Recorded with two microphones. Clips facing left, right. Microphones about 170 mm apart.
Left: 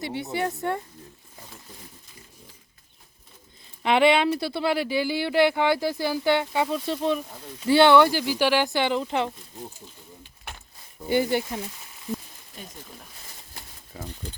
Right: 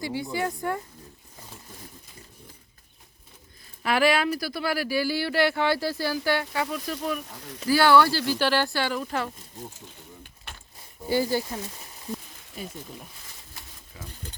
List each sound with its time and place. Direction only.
0.0 s speech: 25° left (ahead or behind)
3.8 s speech: 25° left (ahead or behind)
11.1 s speech: 20° left (ahead or behind)
12.6 s speech: 5° right (ahead or behind)
13.9 s speech: 40° left (ahead or behind)